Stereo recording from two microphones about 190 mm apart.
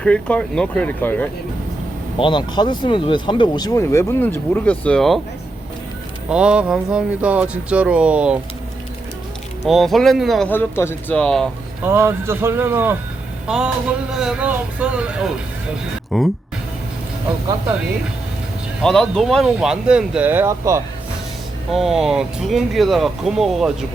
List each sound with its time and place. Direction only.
0.0 s speech: 5° left (ahead or behind)
2.1 s speech: 25° left (ahead or behind); by 5.2 s centre (ahead or behind)
6.2 s speech: 5° right (ahead or behind)
9.6 s speech: centre (ahead or behind)
11.8 s a man's voice: 10° right (ahead or behind)
18.8 s speech: centre (ahead or behind); by 20.8 s 15° right (ahead or behind)
21.7 s speech: centre (ahead or behind)